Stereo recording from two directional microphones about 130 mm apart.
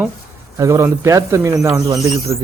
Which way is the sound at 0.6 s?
20° right (ahead or behind).